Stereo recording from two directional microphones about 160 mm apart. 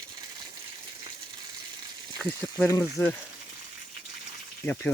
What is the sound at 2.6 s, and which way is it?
Speech, 20° left (ahead or behind).